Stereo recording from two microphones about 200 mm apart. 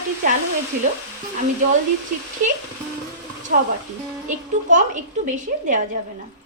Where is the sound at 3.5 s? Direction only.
45° right (ahead or behind).